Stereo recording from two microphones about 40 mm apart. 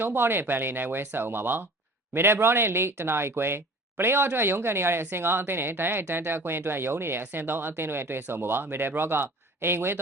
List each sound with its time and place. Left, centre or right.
0.0 s speech: right
2.1 s speech: right
7.3 s speech: right